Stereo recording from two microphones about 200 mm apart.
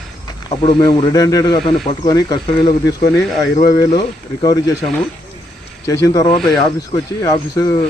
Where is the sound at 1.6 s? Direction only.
30° left (ahead or behind).